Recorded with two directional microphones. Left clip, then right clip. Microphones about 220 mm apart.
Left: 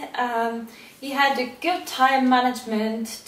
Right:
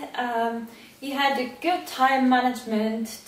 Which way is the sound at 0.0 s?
5° right (ahead or behind).